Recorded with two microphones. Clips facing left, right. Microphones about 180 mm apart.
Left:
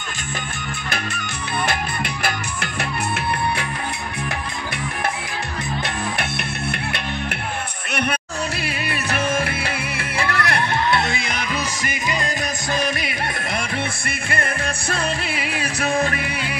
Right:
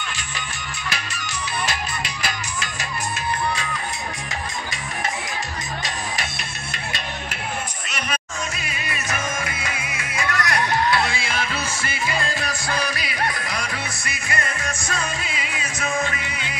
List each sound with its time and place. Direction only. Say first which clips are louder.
0.8 s music: left 2 dB; 55° left (ahead or behind)
8.6 s music: left 4 dB; 60° left (ahead or behind)
10.5 s music: right 1 dB; 25° left (ahead or behind)
14.0 s music: left 3 dB; 55° left (ahead or behind)